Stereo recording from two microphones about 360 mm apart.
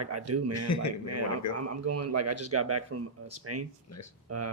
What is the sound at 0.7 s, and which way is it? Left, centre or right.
Speech, left.